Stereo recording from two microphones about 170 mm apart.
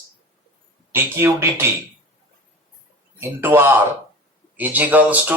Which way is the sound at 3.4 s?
15° right (ahead or behind).